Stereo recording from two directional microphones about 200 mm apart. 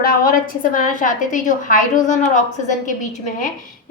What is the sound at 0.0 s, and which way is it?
A woman's voice, 45° left (ahead or behind).